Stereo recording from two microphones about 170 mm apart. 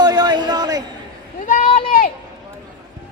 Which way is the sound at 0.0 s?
25° right (ahead or behind).